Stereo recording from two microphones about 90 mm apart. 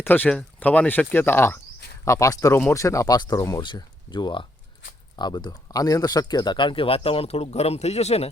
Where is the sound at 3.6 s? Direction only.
60° left (ahead or behind); by 7.8 s 90° left.